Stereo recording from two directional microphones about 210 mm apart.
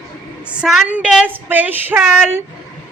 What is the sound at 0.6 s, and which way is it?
Speech, 5° right (ahead or behind).